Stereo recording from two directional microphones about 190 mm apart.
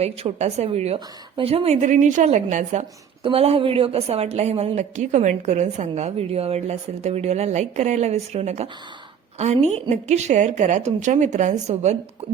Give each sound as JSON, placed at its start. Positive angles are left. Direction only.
{"t": 0.0, "sound": "a woman's voice", "side_deg": -30}